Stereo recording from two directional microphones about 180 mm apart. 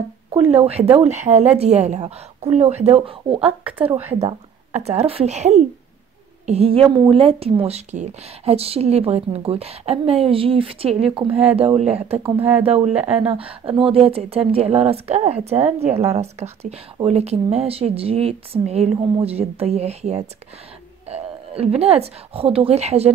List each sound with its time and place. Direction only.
0.3 s speech: 35° right (ahead or behind)
3.3 s speech: 5° right (ahead or behind)
4.2 s speech: 35° right (ahead or behind)